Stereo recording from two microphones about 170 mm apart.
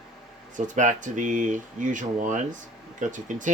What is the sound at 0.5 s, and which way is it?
Speech, 45° right (ahead or behind).